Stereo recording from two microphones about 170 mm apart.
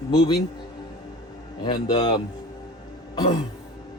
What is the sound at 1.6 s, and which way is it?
Speech, 25° left (ahead or behind).